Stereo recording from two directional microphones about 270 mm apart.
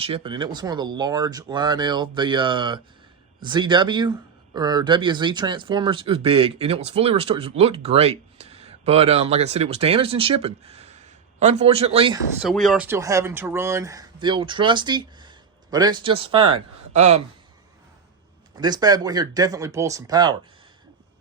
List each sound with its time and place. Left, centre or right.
0.0 s speech: centre
12.4 s speech: centre; by 17.2 s right
18.5 s speech: centre